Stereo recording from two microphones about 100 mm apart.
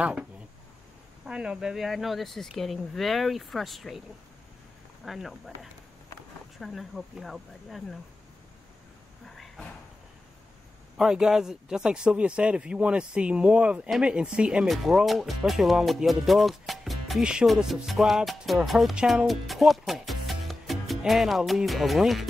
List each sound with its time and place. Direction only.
0.0 s speech: 10° right (ahead or behind)
5.0 s speech: centre (ahead or behind)
9.2 s a sound: 5° left (ahead or behind)
11.0 s speech: 5° right (ahead or behind)
19.9 s music: centre (ahead or behind)